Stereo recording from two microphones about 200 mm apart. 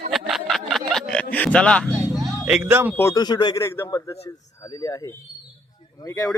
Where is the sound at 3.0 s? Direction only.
15° left (ahead or behind).